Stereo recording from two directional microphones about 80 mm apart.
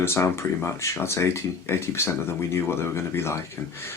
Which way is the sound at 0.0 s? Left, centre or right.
Left.